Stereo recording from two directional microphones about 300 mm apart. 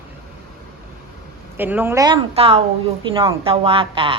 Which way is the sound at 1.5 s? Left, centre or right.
Centre.